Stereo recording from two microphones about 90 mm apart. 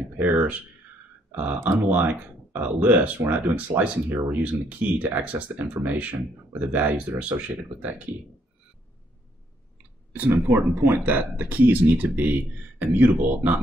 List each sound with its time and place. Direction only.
0.2 s speech: 20° right (ahead or behind)
10.3 s speech: 40° right (ahead or behind)
10.7 s speech: 25° right (ahead or behind)